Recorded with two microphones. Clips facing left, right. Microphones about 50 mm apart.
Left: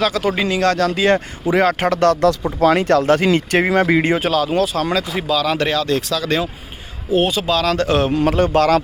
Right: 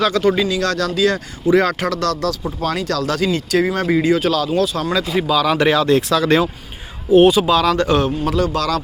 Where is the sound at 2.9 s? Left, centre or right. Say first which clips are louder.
Left 5 dB; left.